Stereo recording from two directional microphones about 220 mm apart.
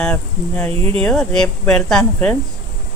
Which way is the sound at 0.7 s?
25° right (ahead or behind).